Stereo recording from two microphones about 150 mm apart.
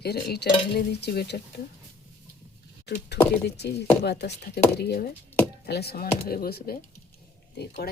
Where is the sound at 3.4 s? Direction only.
90° left.